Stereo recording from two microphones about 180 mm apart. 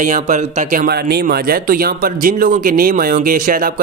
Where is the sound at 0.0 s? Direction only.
45° right (ahead or behind).